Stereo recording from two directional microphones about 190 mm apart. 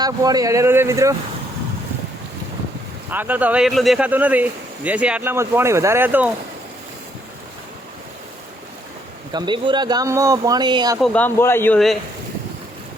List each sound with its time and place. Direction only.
0.0 s speech: 20° right (ahead or behind)
3.1 s speech: 10° right (ahead or behind)
9.3 s speech: 25° right (ahead or behind)
11.0 s speech: 5° left (ahead or behind)